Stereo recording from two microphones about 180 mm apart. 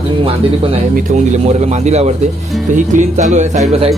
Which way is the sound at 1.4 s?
40° right (ahead or behind).